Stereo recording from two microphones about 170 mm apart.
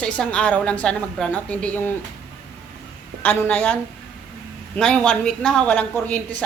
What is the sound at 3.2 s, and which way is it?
A woman's voice, 10° left (ahead or behind).